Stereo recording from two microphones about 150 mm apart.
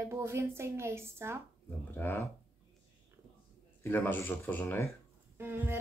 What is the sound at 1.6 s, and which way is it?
Speech, 15° left (ahead or behind).